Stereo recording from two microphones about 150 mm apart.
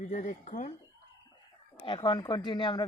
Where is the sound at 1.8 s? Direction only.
35° left (ahead or behind).